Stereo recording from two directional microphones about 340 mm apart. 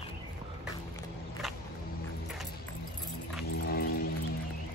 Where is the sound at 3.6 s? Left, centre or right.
Left.